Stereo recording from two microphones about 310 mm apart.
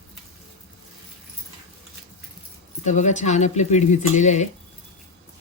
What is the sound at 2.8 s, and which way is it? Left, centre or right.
Speech, left.